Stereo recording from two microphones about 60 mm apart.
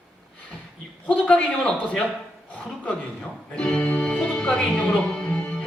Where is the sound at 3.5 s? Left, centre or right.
Centre.